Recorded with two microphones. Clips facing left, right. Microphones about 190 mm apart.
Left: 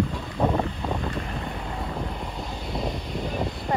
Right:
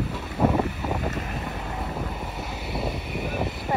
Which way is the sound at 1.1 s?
40° right (ahead or behind).